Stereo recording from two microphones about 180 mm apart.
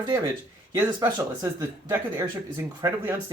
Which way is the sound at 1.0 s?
20° right (ahead or behind).